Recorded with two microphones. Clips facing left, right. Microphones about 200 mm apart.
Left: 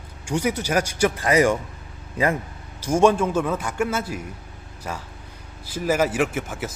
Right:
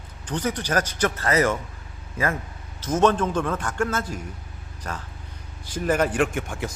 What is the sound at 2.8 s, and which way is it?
A man's voice, 10° left (ahead or behind).